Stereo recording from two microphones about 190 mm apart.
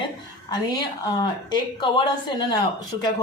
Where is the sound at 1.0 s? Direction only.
20° left (ahead or behind).